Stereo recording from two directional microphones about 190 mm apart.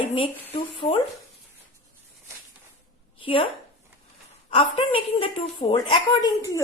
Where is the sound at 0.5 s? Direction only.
30° left (ahead or behind).